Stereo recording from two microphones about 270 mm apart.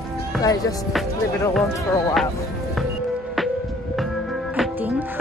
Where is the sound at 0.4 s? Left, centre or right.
Centre.